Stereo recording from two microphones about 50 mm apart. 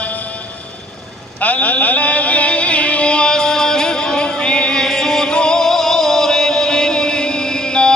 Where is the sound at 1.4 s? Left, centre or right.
Left.